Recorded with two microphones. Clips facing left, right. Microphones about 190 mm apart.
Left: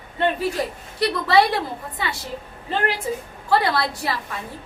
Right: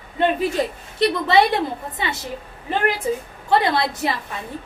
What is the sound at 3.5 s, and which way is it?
Speech, 20° right (ahead or behind).